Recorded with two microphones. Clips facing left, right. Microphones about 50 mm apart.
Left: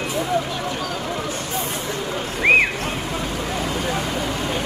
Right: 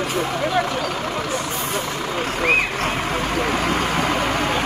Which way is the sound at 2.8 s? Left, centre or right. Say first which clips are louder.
Right 4 dB; right.